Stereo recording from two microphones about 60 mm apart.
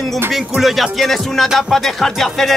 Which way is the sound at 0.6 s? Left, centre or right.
Centre.